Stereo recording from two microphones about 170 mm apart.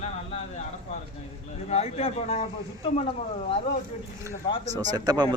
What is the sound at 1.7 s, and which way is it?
A man's voice, 35° left (ahead or behind).